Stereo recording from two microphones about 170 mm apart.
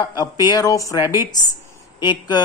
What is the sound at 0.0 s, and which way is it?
Speech, 25° left (ahead or behind).